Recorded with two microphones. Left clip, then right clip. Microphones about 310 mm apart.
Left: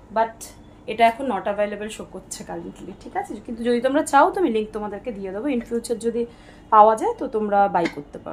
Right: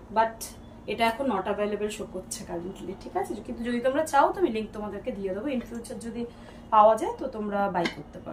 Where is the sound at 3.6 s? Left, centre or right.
Centre.